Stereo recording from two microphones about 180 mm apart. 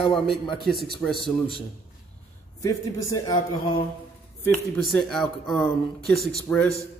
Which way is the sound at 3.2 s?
25° left (ahead or behind).